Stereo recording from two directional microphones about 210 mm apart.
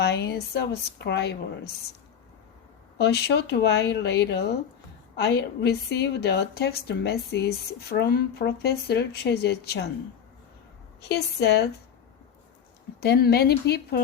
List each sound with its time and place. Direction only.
0.0 s a woman's voice: 50° left (ahead or behind)
3.0 s a woman's voice: 50° left (ahead or behind)
11.1 s a woman's voice: 50° left (ahead or behind)
13.0 s a woman's voice: 50° left (ahead or behind)